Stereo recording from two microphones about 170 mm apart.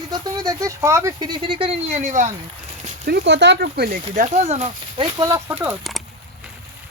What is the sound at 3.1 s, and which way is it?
Speech, 85° right.